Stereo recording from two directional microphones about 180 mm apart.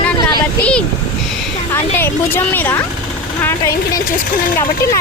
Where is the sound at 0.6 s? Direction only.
5° left (ahead or behind).